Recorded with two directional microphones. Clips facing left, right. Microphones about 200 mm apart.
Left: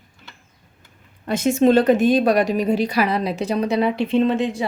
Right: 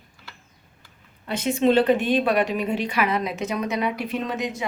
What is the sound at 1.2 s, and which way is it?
Speech, 45° left (ahead or behind).